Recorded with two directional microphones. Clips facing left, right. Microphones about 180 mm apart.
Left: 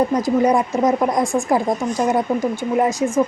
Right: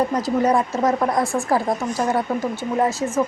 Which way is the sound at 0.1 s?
10° left (ahead or behind).